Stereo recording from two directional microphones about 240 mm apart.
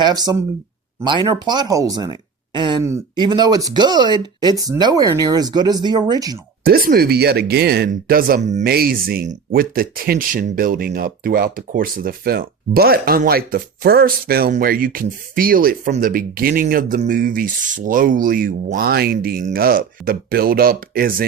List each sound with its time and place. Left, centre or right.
0.0 s speech: centre
6.7 s speech: right